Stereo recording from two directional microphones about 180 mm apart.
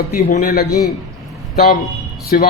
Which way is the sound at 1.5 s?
60° left (ahead or behind).